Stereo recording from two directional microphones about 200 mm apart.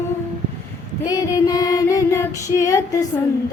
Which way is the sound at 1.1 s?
15° left (ahead or behind).